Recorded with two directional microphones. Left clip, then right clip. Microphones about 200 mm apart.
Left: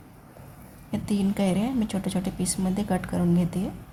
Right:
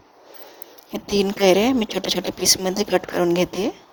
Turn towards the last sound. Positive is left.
turn(degrees=-45)  # may be behind; listen again after turning